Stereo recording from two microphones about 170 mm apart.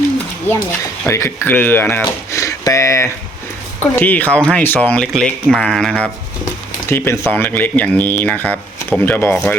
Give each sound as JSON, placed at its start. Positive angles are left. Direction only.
{"t": 1.0, "sound": "speech", "side_deg": 15}
{"t": 6.8, "sound": "speech", "side_deg": 15}